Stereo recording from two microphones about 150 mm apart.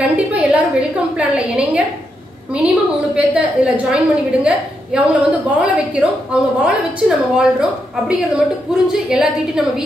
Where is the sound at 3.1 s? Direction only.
5° right (ahead or behind).